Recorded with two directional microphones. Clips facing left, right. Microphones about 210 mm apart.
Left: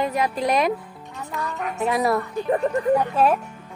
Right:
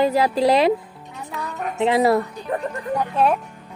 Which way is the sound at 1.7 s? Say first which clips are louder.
Right 5 dB; 25° right (ahead or behind).